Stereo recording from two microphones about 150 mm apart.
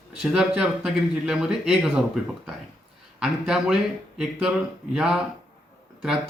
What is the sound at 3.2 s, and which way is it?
A man's voice, 5° right (ahead or behind).